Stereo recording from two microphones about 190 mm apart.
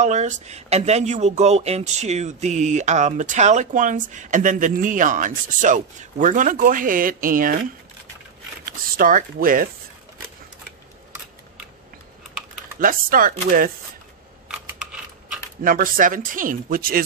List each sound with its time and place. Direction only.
0.0 s speech: 40° right (ahead or behind)
8.6 s speech: 45° right (ahead or behind)
12.8 s speech: 45° right (ahead or behind)
14.7 s a sound: 5° right (ahead or behind)
15.6 s speech: 45° right (ahead or behind)